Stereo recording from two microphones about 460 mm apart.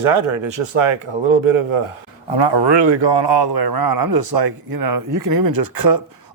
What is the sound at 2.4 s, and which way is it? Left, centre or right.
Speech, right.